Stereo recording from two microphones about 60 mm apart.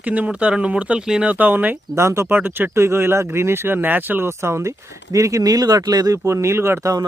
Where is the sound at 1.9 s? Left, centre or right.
Right.